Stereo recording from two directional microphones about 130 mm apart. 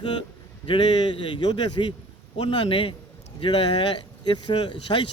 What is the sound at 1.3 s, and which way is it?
Speech, 35° left (ahead or behind).